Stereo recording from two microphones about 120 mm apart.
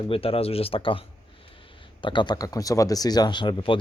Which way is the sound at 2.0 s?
40° left (ahead or behind).